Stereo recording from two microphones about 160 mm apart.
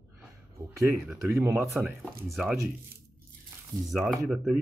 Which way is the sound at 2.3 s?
Centre (ahead or behind).